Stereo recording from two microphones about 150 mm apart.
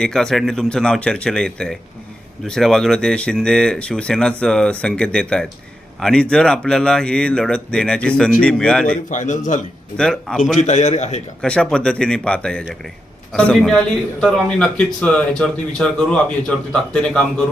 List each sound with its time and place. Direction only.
0.0 s speech: 5° left (ahead or behind)
9.0 s a man's voice: 55° left (ahead or behind)
10.0 s speech: 5° left (ahead or behind)
10.6 s a man's voice: 50° left (ahead or behind)
11.4 s speech: 5° left (ahead or behind)